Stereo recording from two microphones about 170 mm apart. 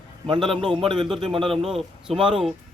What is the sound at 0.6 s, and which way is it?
Speech, centre (ahead or behind).